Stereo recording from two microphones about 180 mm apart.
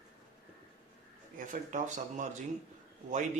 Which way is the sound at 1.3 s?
45° right (ahead or behind).